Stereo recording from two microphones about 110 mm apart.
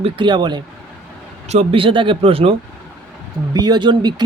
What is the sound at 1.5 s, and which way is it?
Speech, 60° right (ahead or behind).